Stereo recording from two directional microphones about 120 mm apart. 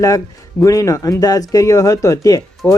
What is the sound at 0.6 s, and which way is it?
Speech, 30° left (ahead or behind).